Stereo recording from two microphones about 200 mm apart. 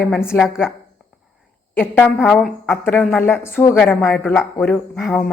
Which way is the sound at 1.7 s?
10° left (ahead or behind).